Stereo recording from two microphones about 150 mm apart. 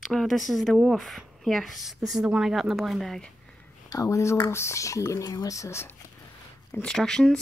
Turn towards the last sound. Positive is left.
turn(degrees=5)  # may be behind; listen again after turning